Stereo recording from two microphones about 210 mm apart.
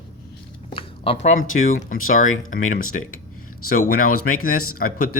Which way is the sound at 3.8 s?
40° left (ahead or behind).